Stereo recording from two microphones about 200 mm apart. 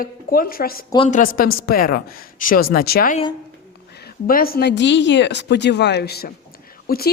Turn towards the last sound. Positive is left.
turn(degrees=50)  # may be behind; listen again after turning